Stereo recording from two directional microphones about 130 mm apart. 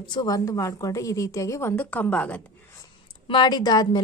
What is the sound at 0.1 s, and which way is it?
A woman's voice, 30° left (ahead or behind).